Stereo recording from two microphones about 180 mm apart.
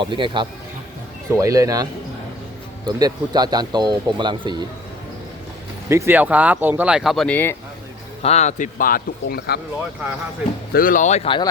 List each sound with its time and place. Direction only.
0.0 s speech: 25° right (ahead or behind)
5.9 s speech: 10° right (ahead or behind); by 7.5 s 10° left (ahead or behind)
8.2 s a man's voice: 35° left (ahead or behind); by 9.6 s 55° left (ahead or behind)
10.7 s a man's voice: 55° left (ahead or behind); by 11.4 s 30° left (ahead or behind)